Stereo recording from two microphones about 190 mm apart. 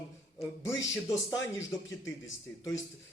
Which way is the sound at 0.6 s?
15° left (ahead or behind).